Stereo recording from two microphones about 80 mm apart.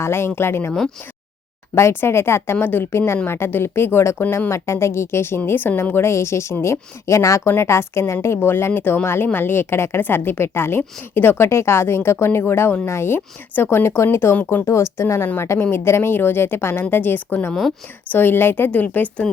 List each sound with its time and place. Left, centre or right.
0.0 s a woman's voice: left
1.7 s a woman's voice: left
17.5 s speech: centre
18.1 s speech: left